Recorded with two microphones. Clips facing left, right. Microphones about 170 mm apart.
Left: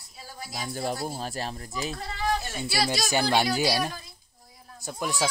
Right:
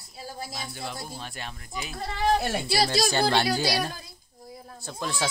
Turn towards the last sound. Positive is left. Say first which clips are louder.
# left 2 dB
turn(degrees=10)  # may be behind; listen again after turning